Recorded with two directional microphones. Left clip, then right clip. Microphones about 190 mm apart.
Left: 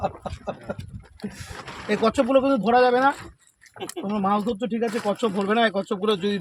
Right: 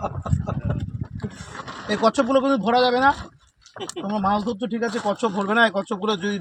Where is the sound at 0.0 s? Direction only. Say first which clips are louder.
Left 1 dB; 45° left (ahead or behind).